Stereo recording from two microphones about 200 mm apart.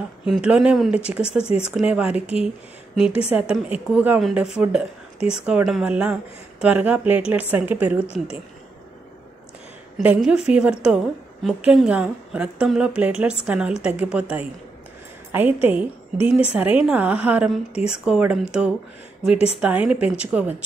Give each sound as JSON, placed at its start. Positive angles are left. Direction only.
{"t": 0.2, "sound": "a woman's voice", "side_deg": -5}
{"t": 9.9, "sound": "a woman's voice", "side_deg": -5}
{"t": 19.3, "sound": "speech", "side_deg": 30}
{"t": 19.6, "sound": "speech", "side_deg": -5}